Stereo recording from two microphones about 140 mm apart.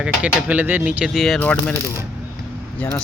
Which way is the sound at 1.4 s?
10° left (ahead or behind).